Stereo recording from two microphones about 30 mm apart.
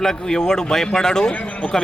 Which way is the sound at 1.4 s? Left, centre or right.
Left.